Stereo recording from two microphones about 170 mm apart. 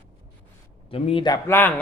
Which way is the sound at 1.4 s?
10° left (ahead or behind).